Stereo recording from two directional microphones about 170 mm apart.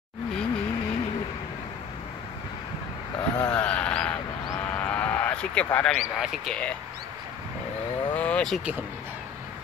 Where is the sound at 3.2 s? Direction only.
25° left (ahead or behind).